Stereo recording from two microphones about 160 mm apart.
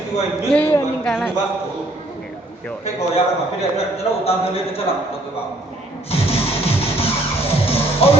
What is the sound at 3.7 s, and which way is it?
A man's voice, 40° left (ahead or behind).